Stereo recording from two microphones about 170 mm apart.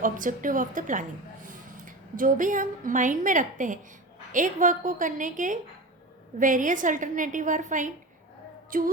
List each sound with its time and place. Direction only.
0.0 s a woman's voice: 50° right (ahead or behind)
8.7 s music: 55° right (ahead or behind)